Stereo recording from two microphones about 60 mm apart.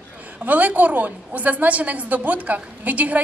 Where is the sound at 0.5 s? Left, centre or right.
Right.